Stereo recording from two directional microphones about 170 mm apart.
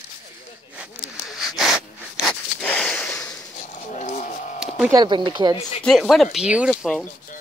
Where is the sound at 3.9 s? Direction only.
45° left (ahead or behind).